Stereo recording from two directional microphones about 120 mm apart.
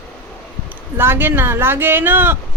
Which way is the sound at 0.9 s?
20° right (ahead or behind).